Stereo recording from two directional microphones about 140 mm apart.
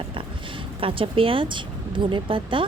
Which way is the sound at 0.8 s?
40° right (ahead or behind).